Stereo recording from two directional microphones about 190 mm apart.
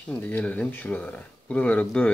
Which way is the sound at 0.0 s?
5° left (ahead or behind).